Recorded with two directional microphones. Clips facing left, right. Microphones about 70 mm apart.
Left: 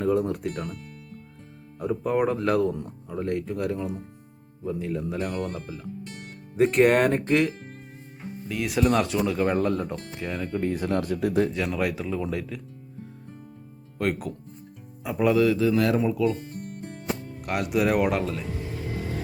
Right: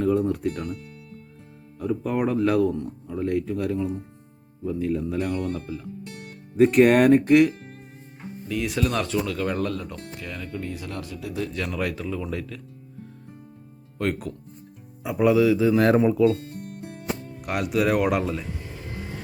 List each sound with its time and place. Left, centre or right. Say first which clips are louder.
0.0 s speech: right 2 dB; centre
0.5 s speech: right 2 dB; centre
2.0 s speech: even; centre
5.3 s speech: right 3 dB; left
6.6 s speech: right 3 dB; centre
8.8 s speech: left 4 dB; centre; by 11.4 s left
11.5 s speech: left 1 dB; centre
14.0 s speech: even; centre
16.0 s speech: right 5 dB; right
17.4 s speech: right 1 dB; centre